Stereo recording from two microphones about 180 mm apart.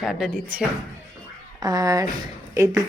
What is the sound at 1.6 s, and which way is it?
Speech, 20° right (ahead or behind).